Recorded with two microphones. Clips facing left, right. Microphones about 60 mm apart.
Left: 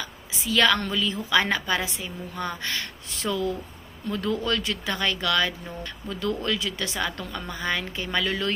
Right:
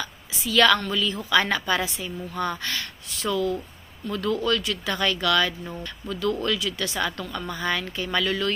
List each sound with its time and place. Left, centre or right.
0.0 s a sound: centre
0.9 s a woman's voice: left
4.9 s a woman's voice: left